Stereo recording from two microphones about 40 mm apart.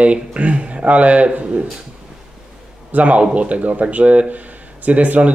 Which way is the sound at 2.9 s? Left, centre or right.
Right.